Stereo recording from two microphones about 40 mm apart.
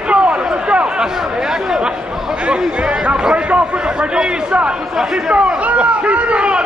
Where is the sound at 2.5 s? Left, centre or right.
Right.